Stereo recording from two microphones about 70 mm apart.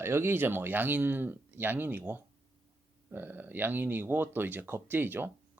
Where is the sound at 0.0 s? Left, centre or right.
Right.